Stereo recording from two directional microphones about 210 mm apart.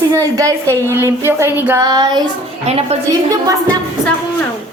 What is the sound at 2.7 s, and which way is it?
Speech, 30° right (ahead or behind).